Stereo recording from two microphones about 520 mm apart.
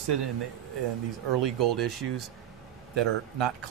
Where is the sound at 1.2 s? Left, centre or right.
Right.